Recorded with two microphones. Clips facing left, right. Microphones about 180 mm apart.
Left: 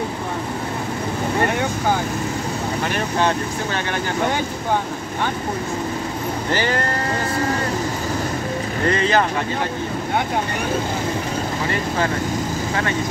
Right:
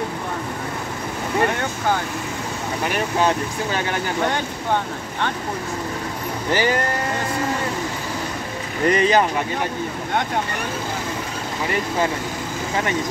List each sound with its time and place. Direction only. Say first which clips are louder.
8.8 s speech: right 2 dB; 15° right (ahead or behind)